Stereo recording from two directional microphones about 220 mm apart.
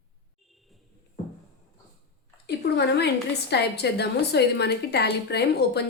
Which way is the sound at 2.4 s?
50° left (ahead or behind).